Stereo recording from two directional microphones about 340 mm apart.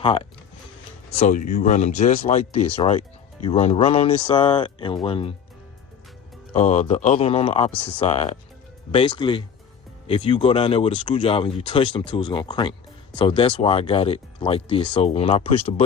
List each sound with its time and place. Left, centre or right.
0.0 s speech: centre
6.5 s speech: centre
7.7 s speech: centre
7.9 s speech: centre